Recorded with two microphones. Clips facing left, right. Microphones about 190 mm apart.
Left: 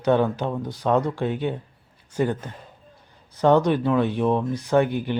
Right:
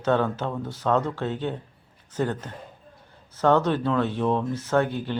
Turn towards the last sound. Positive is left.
turn(degrees=15)  # may be behind; listen again after turning